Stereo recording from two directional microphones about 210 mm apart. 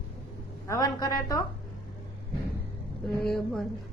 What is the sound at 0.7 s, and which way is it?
Speech, 20° left (ahead or behind).